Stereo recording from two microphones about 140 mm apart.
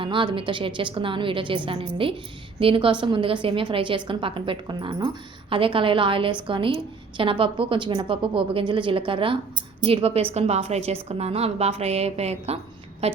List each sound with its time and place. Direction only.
0.0 s a woman's voice: 35° right (ahead or behind)